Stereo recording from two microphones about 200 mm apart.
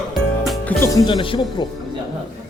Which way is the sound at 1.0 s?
25° left (ahead or behind).